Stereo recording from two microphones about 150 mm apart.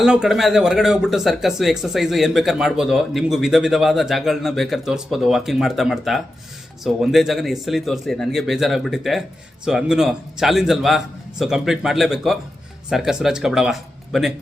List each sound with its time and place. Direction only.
0.0 s speech: 5° right (ahead or behind)